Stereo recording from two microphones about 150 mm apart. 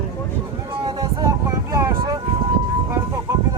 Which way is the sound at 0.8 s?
25° right (ahead or behind).